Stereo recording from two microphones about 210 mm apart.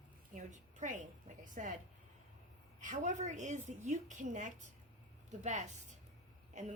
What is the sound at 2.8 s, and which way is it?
A woman's voice, 35° right (ahead or behind).